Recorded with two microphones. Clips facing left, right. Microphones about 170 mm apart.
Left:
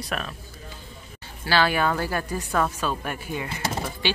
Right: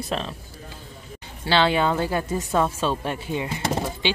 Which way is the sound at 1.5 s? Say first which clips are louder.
Right 2 dB; 25° right (ahead or behind).